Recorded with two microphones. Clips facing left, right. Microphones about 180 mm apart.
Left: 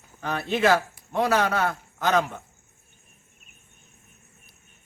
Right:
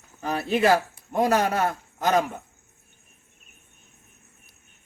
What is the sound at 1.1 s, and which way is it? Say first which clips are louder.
Speech: right 1 dB; 40° right (ahead or behind).